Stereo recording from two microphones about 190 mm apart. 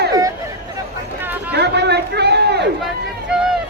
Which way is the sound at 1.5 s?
60° right (ahead or behind).